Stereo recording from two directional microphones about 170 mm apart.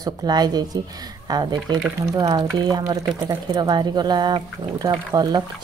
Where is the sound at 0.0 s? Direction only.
25° right (ahead or behind).